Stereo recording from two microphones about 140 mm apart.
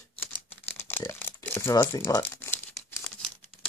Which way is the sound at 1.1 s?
15° left (ahead or behind).